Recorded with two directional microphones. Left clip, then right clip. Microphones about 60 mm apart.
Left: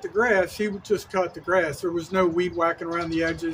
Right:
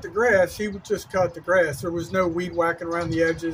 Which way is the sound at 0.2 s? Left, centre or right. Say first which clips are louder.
Right 2 dB; left.